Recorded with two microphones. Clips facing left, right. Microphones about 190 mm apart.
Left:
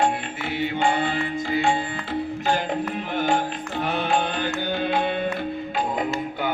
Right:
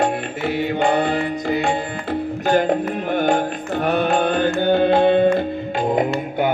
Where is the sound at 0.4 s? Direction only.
40° right (ahead or behind).